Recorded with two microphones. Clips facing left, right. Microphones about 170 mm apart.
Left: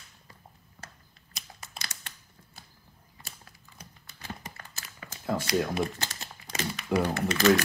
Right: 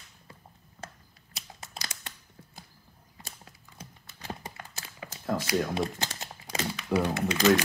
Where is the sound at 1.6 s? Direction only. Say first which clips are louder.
Right 2 dB; 20° right (ahead or behind).